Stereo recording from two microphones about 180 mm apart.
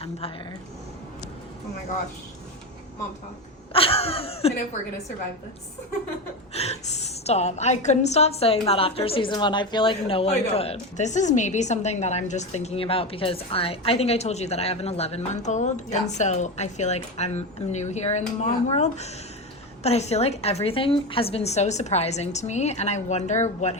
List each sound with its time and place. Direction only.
3.7 s a woman's voice: 30° left (ahead or behind)
6.5 s a woman's voice: 35° left (ahead or behind)